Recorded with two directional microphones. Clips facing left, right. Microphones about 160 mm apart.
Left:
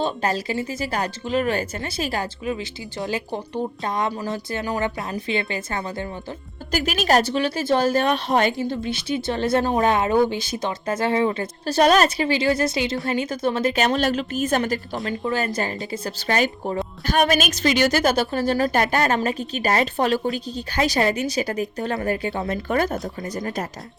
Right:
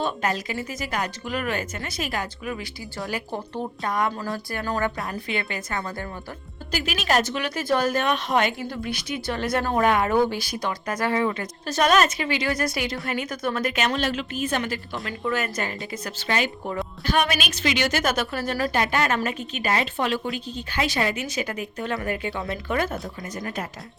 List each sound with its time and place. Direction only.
0.0 s a woman's voice: 30° left (ahead or behind)
3.0 s a woman's voice: 20° left (ahead or behind)
6.7 s a woman's voice: 45° left (ahead or behind)
15.0 s a woman's voice: 30° left (ahead or behind)
18.7 s a woman's voice: 40° left (ahead or behind)